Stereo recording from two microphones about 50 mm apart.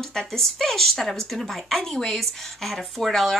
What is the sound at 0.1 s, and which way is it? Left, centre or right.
Speech, centre.